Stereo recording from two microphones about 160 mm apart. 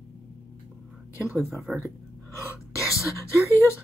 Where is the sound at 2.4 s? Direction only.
20° left (ahead or behind).